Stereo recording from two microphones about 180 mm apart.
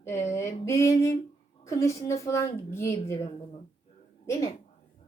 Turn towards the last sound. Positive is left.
turn(degrees=15)  # may be behind; listen again after turning